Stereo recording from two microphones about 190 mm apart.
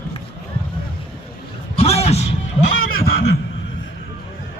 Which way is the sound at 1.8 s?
30° left (ahead or behind).